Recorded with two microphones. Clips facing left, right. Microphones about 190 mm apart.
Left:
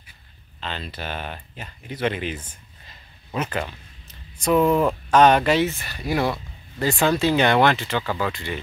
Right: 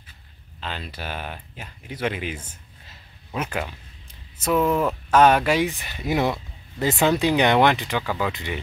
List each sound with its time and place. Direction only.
0.6 s speech: 10° right (ahead or behind)